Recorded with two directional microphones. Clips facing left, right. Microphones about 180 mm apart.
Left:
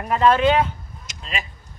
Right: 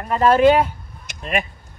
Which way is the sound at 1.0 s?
55° right (ahead or behind).